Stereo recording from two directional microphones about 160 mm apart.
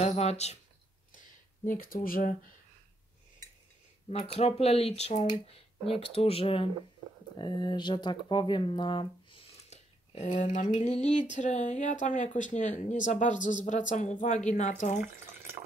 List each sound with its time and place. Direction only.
0.0 s speech: 40° left (ahead or behind)
1.7 s speech: 60° left (ahead or behind)
4.1 s speech: 40° left (ahead or behind)
9.7 s speech: 45° left (ahead or behind)